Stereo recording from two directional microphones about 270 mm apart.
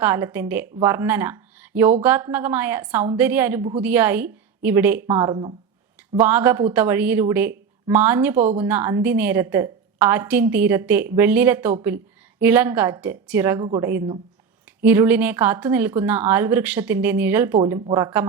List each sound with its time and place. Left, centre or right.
0.0 s speech: centre
8.4 s a woman's voice: right
8.6 s speech: centre